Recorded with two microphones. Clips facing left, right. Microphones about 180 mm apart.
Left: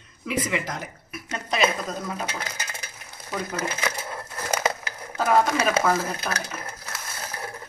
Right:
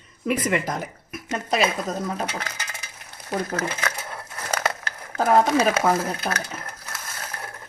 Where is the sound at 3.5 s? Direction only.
10° left (ahead or behind).